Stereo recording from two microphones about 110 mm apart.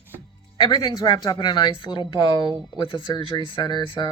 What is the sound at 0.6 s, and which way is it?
Speech, 40° left (ahead or behind).